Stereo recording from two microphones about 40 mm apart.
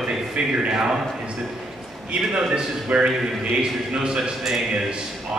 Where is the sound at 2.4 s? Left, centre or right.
Centre.